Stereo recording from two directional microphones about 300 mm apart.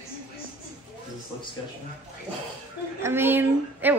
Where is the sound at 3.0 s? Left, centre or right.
Centre.